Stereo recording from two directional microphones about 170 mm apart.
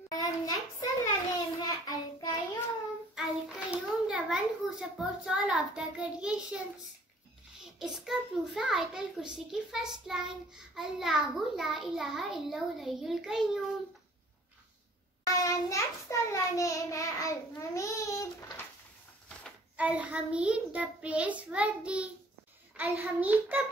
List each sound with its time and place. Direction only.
0.1 s child singing: 25° left (ahead or behind)
3.2 s a child's voice: 5° right (ahead or behind)
7.8 s a child's voice: 5° right (ahead or behind)
15.2 s child singing: 20° left (ahead or behind)
19.8 s child singing: 5° right (ahead or behind)